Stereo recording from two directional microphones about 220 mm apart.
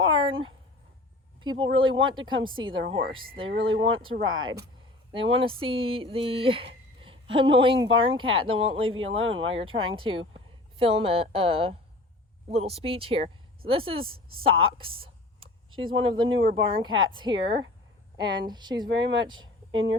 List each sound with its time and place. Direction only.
0.0 s speech: 25° right (ahead or behind)
9.2 s speech: 65° right (ahead or behind)
9.5 s speech: 25° right (ahead or behind)
14.5 s a woman's voice: 70° right (ahead or behind)
14.8 s a sound: 25° right (ahead or behind)
16.2 s speech: 60° right (ahead or behind)
16.6 s speech: 20° right (ahead or behind)
18.9 s speech: 55° right (ahead or behind)